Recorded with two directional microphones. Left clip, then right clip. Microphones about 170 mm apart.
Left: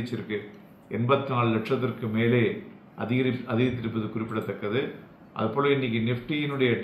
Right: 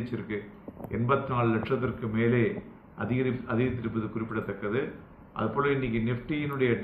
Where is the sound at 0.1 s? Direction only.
25° left (ahead or behind).